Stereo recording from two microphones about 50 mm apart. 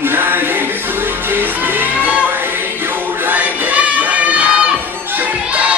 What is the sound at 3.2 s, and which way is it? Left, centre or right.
Crowd, right.